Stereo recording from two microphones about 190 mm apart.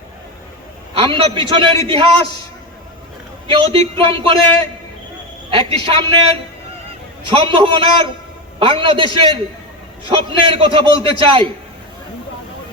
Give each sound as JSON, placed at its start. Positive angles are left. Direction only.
{"t": 0.9, "sound": "a man's voice", "side_deg": -25}
{"t": 3.5, "sound": "a man's voice", "side_deg": -25}